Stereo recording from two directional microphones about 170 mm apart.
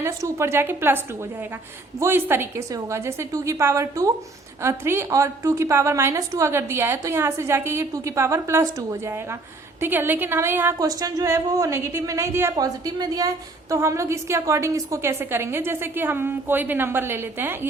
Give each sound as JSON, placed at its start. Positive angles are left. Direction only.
{"t": 0.0, "sound": "a woman's voice", "side_deg": -15}